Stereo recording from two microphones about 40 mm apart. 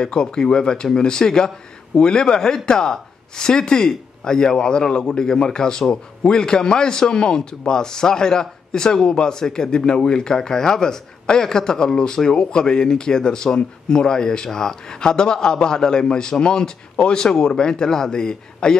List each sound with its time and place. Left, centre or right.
0.0 s speech: centre